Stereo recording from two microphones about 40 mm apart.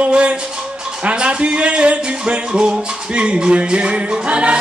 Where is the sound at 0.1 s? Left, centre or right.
Right.